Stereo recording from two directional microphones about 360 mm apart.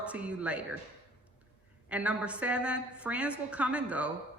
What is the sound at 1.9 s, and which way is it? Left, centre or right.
A woman's voice, centre.